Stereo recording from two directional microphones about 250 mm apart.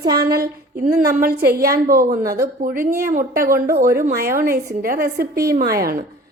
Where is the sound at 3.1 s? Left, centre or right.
Right.